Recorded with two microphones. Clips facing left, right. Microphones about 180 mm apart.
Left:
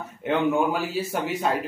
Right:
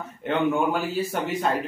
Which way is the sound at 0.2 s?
5° left (ahead or behind).